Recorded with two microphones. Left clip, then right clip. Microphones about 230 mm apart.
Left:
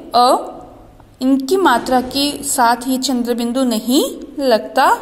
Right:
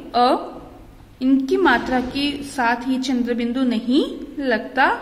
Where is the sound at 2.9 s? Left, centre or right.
Centre.